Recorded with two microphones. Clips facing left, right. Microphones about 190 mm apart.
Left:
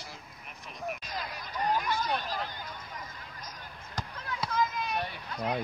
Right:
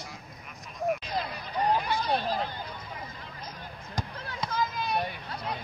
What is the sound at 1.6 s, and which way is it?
Hubbub, 35° right (ahead or behind).